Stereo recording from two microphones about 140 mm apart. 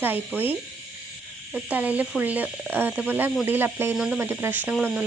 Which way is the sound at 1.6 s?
10° right (ahead or behind).